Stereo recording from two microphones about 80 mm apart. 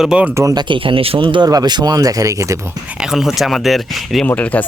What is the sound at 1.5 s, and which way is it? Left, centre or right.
Speech, right.